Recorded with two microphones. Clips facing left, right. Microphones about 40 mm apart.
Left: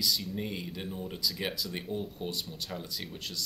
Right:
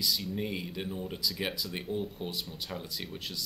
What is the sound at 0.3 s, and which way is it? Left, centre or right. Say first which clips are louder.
Speech: right 1 dB; centre.